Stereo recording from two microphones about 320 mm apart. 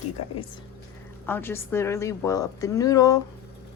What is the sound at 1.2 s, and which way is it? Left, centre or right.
A woman's voice, centre.